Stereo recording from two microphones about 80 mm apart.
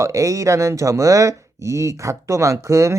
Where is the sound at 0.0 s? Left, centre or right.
Right.